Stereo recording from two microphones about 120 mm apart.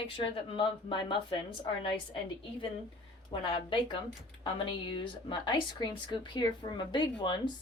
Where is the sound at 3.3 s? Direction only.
40° left (ahead or behind).